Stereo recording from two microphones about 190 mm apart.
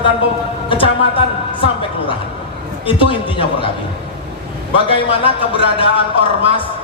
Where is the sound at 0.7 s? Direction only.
30° left (ahead or behind).